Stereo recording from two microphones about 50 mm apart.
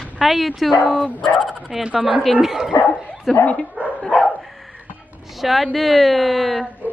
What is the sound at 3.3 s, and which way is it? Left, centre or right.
Speech, left.